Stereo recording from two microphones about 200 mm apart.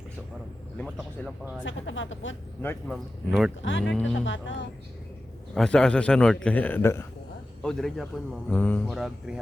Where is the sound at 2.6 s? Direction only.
10° left (ahead or behind).